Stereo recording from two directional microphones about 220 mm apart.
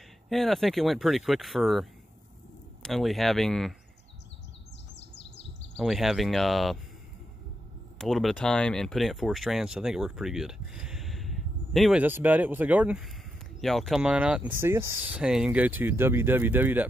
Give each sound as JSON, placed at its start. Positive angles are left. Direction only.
{"t": 0.3, "sound": "speech", "side_deg": 0}
{"t": 4.9, "sound": "bird", "side_deg": 50}
{"t": 5.8, "sound": "speech", "side_deg": 0}
{"t": 8.0, "sound": "speech", "side_deg": 0}